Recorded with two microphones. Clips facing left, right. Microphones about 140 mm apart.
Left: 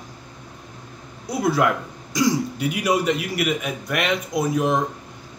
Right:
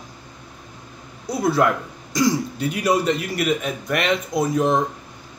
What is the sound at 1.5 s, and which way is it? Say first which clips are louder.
A man's voice: right 1 dB; 10° left (ahead or behind).